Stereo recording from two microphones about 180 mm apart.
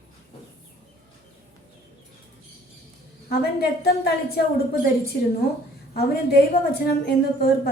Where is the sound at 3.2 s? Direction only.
60° left (ahead or behind).